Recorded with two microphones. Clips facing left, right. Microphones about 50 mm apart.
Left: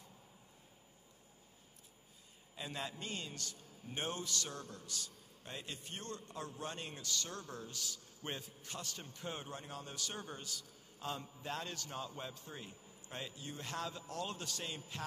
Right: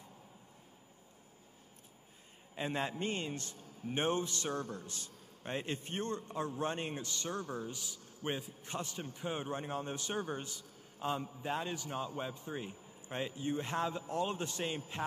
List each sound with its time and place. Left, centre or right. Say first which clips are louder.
2.5 s a man's voice: right 7 dB; right